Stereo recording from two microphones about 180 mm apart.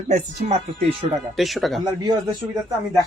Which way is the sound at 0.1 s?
40° right (ahead or behind).